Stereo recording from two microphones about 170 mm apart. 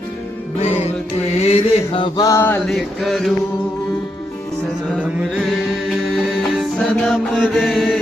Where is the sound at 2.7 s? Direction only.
Centre (ahead or behind).